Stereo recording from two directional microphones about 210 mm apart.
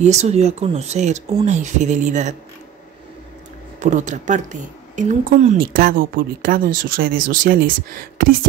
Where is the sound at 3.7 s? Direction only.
35° right (ahead or behind).